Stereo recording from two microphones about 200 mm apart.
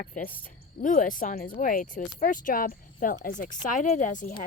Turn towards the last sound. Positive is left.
turn(degrees=40)  # may be behind; listen again after turning